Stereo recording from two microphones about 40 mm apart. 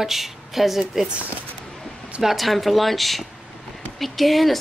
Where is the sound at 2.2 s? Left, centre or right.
Centre.